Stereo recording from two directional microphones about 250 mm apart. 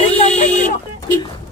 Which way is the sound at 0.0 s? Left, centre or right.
Left.